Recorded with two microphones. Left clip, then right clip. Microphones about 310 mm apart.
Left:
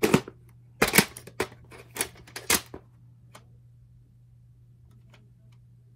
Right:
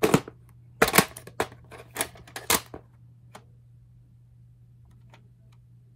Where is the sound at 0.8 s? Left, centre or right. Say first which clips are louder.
Right 2 dB; centre.